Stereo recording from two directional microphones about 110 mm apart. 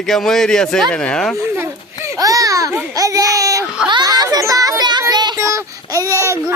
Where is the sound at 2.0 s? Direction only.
30° right (ahead or behind).